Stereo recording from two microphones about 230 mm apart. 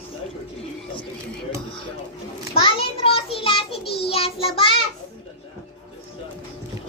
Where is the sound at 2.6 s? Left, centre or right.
Left.